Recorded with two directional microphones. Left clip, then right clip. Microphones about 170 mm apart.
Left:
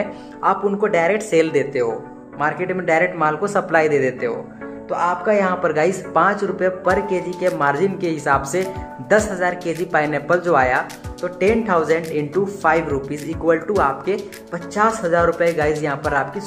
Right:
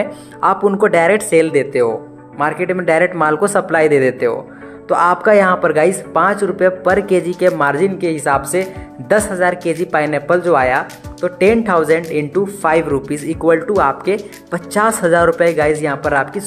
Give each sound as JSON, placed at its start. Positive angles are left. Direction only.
{"t": 0.0, "sound": "speech", "side_deg": -35}
{"t": 1.3, "sound": "speech", "side_deg": -20}
{"t": 4.8, "sound": "music", "side_deg": -45}
{"t": 5.6, "sound": "speech", "side_deg": -25}